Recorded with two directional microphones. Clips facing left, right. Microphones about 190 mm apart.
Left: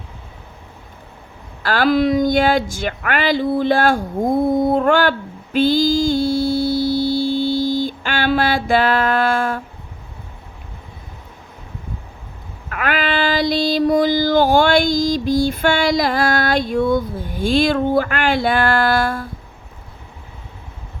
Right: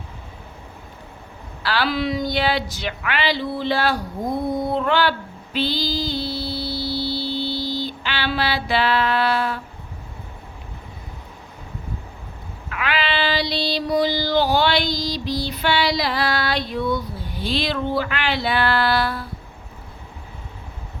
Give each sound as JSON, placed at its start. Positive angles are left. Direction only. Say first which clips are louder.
{"t": 1.6, "sound": "child singing", "louder": "left 7 dB", "side_deg": 45}
{"t": 5.5, "sound": "mantra", "louder": "left 9 dB", "side_deg": 50}
{"t": 12.6, "sound": "child singing", "louder": "left 4 dB", "side_deg": 50}